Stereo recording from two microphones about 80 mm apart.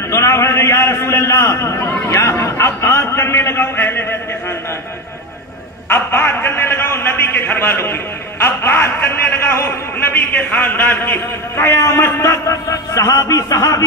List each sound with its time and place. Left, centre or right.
0.1 s a sound: left
2.0 s a man's voice: left
5.9 s a man's voice: left